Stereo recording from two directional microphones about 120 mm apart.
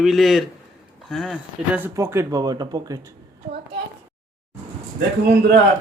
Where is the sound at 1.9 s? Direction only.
25° right (ahead or behind).